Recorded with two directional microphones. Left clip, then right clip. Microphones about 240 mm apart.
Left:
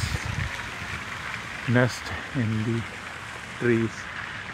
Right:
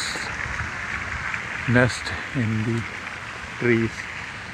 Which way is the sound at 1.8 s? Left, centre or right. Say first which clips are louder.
Right 4 dB; centre.